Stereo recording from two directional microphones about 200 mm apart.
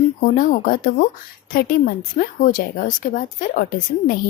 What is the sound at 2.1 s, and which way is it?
A woman's voice, 40° left (ahead or behind).